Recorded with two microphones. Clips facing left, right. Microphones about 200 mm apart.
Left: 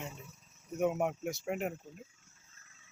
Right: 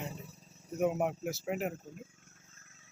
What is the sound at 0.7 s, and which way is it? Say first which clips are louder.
Speech: right 1 dB; centre (ahead or behind).